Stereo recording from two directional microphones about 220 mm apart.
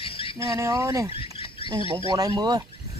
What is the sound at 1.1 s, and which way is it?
Rodents, 25° left (ahead or behind).